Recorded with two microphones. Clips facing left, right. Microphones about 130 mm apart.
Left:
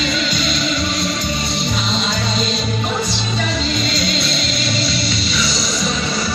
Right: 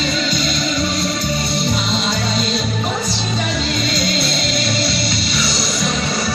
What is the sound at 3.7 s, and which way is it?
Music, 50° right (ahead or behind).